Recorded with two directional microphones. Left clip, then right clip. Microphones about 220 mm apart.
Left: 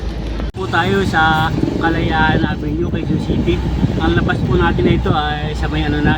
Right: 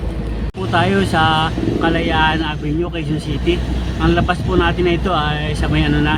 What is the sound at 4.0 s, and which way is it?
Speech, 25° right (ahead or behind).